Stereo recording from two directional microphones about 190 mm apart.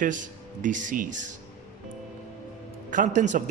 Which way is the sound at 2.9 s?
40° right (ahead or behind).